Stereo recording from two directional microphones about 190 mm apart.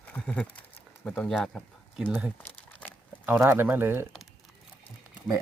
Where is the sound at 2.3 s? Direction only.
10° left (ahead or behind).